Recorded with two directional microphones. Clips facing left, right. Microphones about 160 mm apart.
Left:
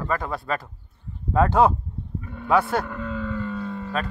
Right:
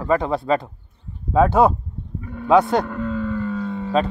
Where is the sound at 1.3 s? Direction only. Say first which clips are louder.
Right 3 dB; 10° right (ahead or behind).